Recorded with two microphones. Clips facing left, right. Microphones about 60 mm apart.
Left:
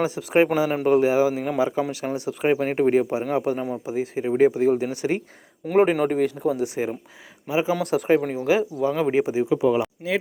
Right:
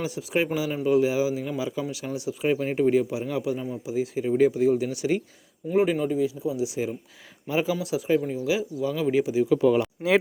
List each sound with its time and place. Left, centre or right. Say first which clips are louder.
0.0 s speech: left 7 dB; left
0.4 s speech: left 5 dB; left
6.0 s speech: left 4 dB; left
7.4 s speech: left 2 dB; centre
7.8 s speech: left 4 dB; left
9.6 s speech: even; centre